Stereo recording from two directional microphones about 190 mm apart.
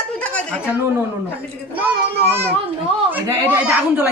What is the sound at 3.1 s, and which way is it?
A man's voice, 10° right (ahead or behind).